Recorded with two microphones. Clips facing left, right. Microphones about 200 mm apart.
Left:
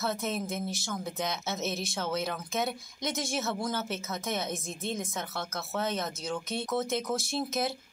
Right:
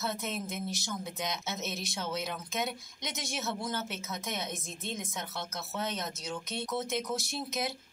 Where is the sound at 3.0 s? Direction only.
50° left (ahead or behind).